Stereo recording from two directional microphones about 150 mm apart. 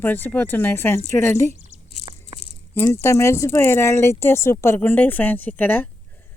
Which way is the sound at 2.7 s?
15° left (ahead or behind).